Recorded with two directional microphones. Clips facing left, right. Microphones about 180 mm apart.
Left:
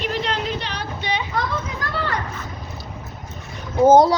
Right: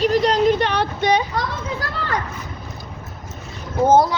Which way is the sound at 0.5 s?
60° right (ahead or behind).